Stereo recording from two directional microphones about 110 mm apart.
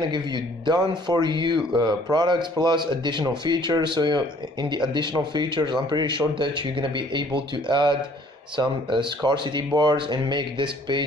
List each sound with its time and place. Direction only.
0.1 s speech: 40° right (ahead or behind)